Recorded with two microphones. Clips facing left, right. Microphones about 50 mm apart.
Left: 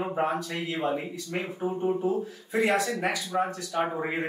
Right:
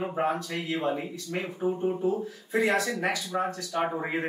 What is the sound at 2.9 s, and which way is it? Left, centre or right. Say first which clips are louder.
Speech: left 1 dB; left.